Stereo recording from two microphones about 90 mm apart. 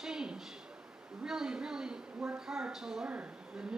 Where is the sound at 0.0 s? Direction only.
5° right (ahead or behind).